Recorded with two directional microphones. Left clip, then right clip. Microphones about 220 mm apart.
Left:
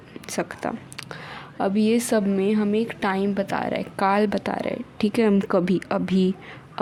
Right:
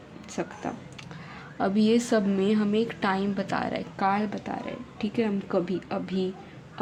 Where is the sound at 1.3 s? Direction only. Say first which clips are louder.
Left 3 dB; 20° left (ahead or behind).